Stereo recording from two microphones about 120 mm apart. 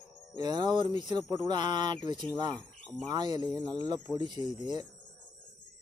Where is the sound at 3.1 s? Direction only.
35° right (ahead or behind).